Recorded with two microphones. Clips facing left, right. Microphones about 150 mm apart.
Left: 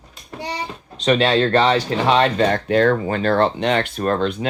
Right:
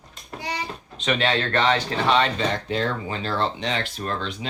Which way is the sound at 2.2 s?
55° left (ahead or behind).